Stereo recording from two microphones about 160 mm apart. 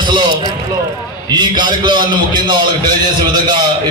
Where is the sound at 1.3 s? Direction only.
30° right (ahead or behind).